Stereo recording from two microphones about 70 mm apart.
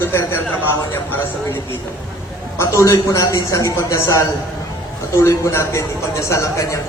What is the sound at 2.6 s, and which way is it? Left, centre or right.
A man's voice, left.